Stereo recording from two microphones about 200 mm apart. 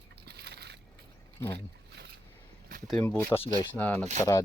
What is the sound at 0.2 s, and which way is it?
Boat, 55° right (ahead or behind).